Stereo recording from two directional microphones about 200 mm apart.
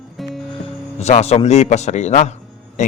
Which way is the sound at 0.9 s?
35° left (ahead or behind).